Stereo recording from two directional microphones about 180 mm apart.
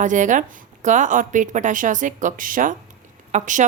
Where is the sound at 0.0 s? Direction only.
45° right (ahead or behind).